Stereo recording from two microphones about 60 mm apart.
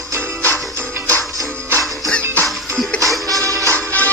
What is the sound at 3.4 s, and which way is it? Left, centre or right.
Music, right.